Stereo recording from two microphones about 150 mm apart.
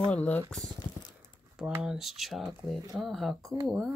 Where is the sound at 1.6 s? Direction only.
5° right (ahead or behind).